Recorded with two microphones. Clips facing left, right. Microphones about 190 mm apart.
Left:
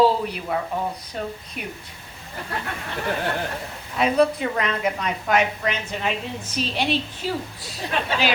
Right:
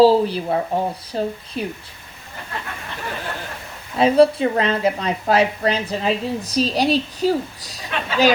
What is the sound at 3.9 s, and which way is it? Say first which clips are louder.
A woman's voice: right 5 dB; 30° right (ahead or behind).